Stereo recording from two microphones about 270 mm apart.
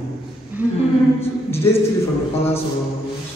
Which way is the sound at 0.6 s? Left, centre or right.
Centre.